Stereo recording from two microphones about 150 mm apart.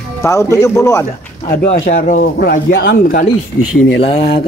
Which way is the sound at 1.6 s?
75° left (ahead or behind).